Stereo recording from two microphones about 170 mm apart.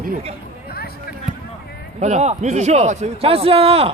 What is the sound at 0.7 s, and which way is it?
Basketball bounce, 65° left (ahead or behind).